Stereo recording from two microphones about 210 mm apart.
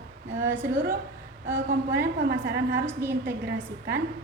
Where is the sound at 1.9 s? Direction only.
50° right (ahead or behind).